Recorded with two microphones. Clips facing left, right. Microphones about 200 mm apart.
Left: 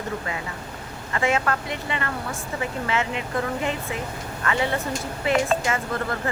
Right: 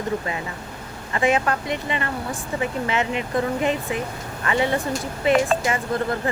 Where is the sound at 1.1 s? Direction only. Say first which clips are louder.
Right 3 dB; 20° right (ahead or behind).